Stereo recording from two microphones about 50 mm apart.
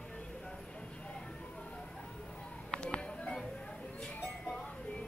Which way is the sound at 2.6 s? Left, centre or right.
Centre.